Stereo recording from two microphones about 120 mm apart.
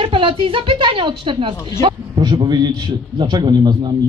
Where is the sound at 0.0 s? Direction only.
45° right (ahead or behind).